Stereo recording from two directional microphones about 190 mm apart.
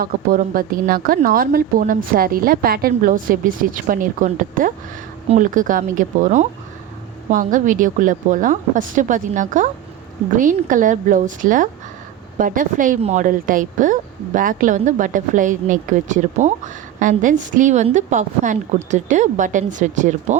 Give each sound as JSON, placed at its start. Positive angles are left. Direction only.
{"t": 0.0, "sound": "a woman's voice", "side_deg": -45}